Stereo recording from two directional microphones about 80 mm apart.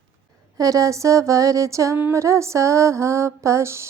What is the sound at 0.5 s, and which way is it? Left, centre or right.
Speech, right.